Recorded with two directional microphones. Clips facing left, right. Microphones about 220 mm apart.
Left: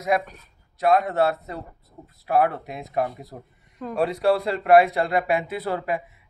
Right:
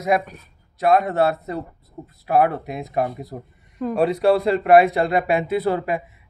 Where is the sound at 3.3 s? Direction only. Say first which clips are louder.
Right 7 dB; 25° right (ahead or behind).